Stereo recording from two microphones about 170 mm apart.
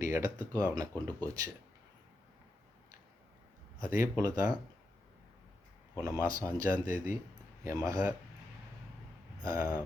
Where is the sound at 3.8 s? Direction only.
15° right (ahead or behind).